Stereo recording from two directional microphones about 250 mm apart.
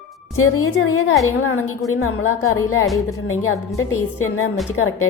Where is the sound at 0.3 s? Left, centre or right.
Left.